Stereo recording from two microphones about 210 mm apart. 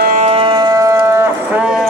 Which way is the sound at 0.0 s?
35° right (ahead or behind).